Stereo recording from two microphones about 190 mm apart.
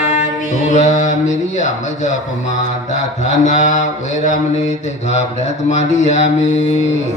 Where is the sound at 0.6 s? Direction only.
40° left (ahead or behind).